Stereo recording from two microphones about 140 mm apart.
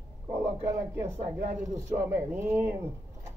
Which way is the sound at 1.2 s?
60° right (ahead or behind).